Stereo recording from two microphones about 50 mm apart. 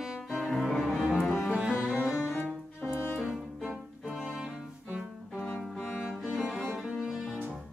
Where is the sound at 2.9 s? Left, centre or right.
Left.